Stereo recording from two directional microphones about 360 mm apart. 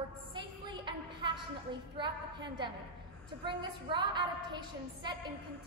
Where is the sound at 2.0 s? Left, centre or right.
Centre.